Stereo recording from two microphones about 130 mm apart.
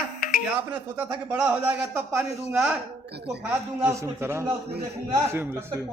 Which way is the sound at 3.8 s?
20° right (ahead or behind).